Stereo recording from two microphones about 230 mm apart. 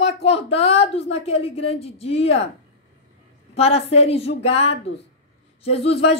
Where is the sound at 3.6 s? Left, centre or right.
Left.